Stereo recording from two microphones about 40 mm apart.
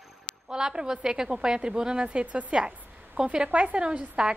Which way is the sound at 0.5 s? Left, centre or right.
Centre.